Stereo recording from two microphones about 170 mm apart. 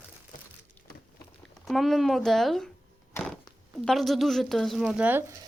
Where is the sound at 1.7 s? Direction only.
Centre (ahead or behind).